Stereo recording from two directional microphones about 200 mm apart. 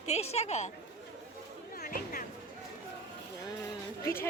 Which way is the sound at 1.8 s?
45° left (ahead or behind).